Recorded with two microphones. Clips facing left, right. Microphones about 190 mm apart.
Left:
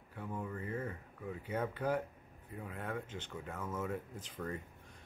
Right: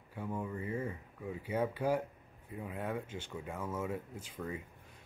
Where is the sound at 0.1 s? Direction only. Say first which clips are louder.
Right 3 dB; 10° right (ahead or behind).